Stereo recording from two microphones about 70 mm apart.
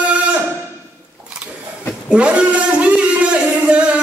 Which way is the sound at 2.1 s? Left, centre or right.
Centre.